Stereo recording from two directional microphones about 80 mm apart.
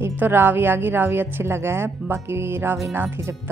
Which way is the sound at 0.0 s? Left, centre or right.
Right.